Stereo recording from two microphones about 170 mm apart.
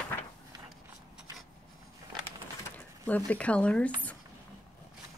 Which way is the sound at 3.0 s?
10° left (ahead or behind).